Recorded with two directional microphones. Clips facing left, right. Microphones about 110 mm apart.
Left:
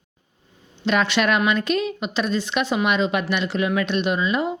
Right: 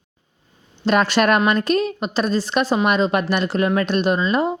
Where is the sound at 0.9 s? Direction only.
40° right (ahead or behind).